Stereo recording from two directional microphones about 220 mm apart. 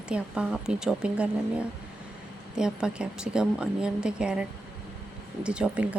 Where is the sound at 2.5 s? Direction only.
5° right (ahead or behind).